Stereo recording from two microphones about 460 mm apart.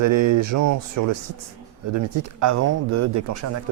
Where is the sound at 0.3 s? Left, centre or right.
Right.